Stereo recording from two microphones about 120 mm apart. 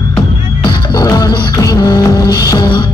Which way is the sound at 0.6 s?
35° left (ahead or behind).